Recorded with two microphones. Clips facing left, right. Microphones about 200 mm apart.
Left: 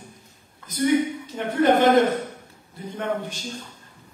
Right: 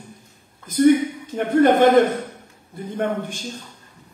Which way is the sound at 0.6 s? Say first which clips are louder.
Right 6 dB; 50° right (ahead or behind).